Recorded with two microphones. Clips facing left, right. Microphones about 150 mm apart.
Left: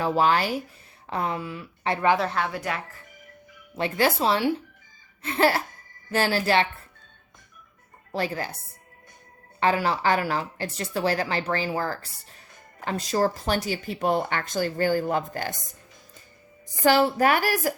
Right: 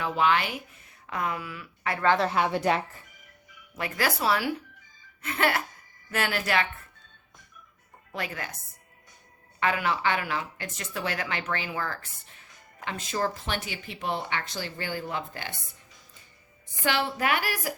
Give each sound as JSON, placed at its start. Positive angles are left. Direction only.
{"t": 0.0, "sound": "a woman's voice", "side_deg": 35}
{"t": 2.5, "sound": "speech", "side_deg": -25}
{"t": 3.8, "sound": "a woman's voice", "side_deg": 25}
{"t": 8.1, "sound": "a woman's voice", "side_deg": 30}
{"t": 9.6, "sound": "a woman's voice", "side_deg": 30}
{"t": 16.8, "sound": "a woman's voice", "side_deg": 40}